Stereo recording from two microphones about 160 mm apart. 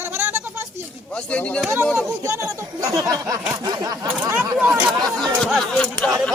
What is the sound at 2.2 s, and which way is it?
Speech, 20° right (ahead or behind).